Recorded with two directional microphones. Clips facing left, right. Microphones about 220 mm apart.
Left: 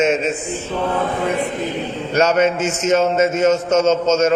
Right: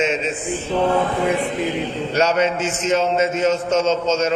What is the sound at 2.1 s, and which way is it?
A man's voice, 50° left (ahead or behind).